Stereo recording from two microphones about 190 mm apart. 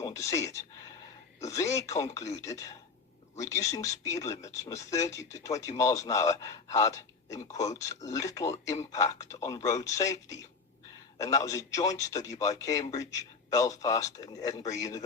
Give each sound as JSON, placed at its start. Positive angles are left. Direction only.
{"t": 0.0, "sound": "speech", "side_deg": 15}